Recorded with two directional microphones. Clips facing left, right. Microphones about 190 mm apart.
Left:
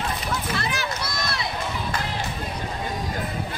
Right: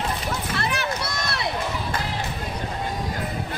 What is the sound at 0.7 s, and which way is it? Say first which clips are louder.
Run: right 2 dB; 65° right (ahead or behind).